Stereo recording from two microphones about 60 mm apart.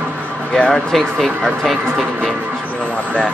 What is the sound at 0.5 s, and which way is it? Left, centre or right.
Speech, centre.